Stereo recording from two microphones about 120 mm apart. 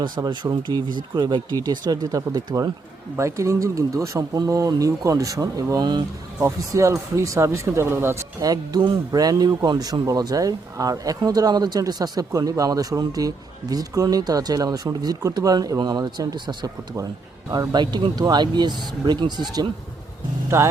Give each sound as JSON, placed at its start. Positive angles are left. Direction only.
{"t": 0.0, "sound": "speech", "side_deg": -35}
{"t": 20.5, "sound": "speech", "side_deg": -25}